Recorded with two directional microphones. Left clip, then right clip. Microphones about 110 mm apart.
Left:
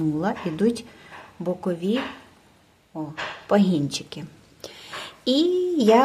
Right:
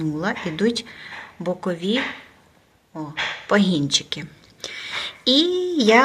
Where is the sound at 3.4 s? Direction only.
15° left (ahead or behind).